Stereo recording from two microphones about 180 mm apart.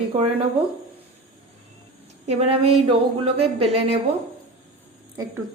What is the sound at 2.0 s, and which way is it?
Speech, 35° right (ahead or behind).